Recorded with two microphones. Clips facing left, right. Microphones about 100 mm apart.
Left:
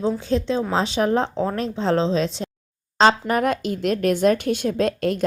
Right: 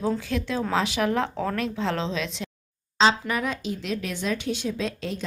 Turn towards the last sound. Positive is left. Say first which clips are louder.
# left 9 dB
turn(degrees=55)  # may be behind; listen again after turning